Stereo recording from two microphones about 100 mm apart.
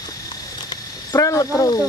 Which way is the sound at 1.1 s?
30° left (ahead or behind).